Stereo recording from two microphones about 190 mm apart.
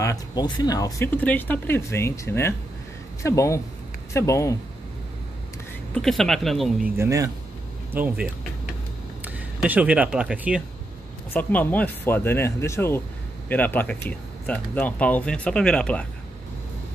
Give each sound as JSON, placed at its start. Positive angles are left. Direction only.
{"t": 0.0, "sound": "speech", "side_deg": 20}
{"t": 5.9, "sound": "speech", "side_deg": 0}
{"t": 7.0, "sound": "speech", "side_deg": -15}
{"t": 11.3, "sound": "speech", "side_deg": 10}